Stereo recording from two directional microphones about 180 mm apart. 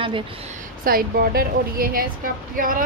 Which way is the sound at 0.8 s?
55° right (ahead or behind).